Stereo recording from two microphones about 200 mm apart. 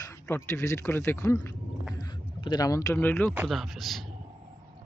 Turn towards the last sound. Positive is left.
turn(degrees=0)  # may be behind; listen again after turning